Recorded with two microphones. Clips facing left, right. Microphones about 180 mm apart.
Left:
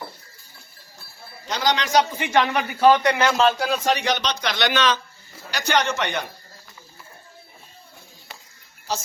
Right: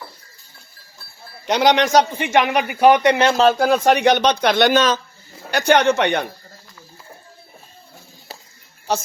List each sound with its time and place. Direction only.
1.5 s speech: 65° right (ahead or behind)
2.1 s a man's voice: 20° right (ahead or behind)
3.4 s speech: 50° right (ahead or behind)
5.5 s speech: 55° right (ahead or behind)